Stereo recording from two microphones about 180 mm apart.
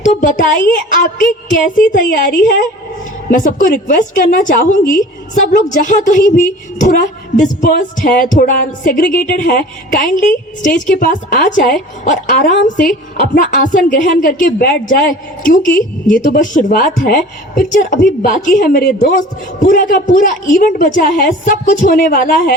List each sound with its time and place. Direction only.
0.0 s a woman's voice: 45° left (ahead or behind)
6.0 s a woman's voice: 45° left (ahead or behind)